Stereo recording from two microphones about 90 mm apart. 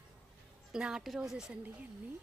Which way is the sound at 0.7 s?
10° right (ahead or behind).